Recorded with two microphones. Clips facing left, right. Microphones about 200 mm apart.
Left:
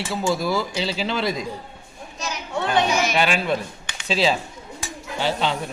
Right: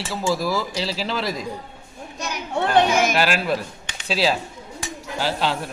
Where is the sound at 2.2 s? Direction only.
55° right (ahead or behind).